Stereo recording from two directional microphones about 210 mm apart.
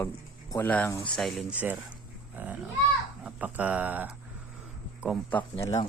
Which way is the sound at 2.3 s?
5° right (ahead or behind).